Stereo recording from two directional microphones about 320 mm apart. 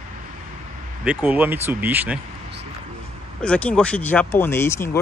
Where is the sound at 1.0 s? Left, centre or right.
Centre.